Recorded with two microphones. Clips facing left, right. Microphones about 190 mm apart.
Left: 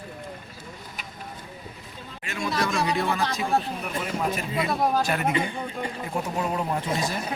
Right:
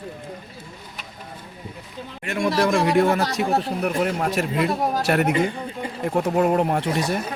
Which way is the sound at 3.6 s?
70° right (ahead or behind).